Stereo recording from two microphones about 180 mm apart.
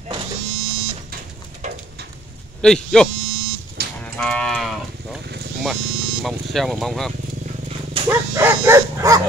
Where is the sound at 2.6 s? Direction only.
5° left (ahead or behind).